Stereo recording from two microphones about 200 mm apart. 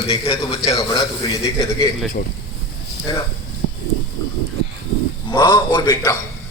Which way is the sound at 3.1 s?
20° left (ahead or behind).